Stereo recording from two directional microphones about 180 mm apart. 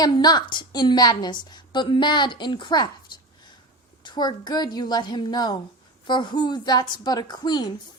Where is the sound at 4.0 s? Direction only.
25° left (ahead or behind).